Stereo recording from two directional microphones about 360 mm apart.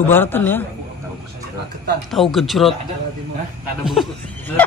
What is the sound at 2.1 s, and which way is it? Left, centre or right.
Speech, centre.